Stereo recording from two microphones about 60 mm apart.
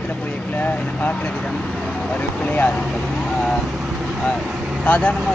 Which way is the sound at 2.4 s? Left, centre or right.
Left.